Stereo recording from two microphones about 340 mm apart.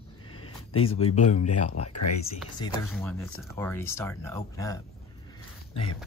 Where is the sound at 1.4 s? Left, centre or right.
Left.